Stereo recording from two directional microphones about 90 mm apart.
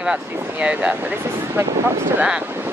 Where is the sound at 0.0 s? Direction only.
10° right (ahead or behind).